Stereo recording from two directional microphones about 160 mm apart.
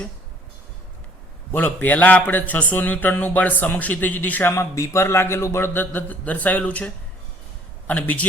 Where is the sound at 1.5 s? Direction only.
10° left (ahead or behind).